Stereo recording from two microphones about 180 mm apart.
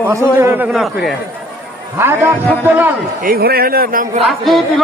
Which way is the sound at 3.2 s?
55° right (ahead or behind).